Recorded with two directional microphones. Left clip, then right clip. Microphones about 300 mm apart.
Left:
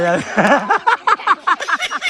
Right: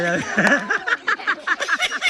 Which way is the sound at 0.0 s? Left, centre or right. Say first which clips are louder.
Left 4 dB; centre.